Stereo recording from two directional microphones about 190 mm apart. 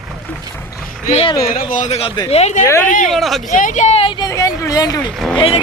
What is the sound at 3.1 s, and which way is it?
Speech, centre (ahead or behind).